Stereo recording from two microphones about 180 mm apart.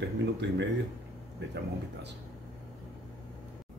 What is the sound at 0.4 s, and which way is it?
Speech, 80° right.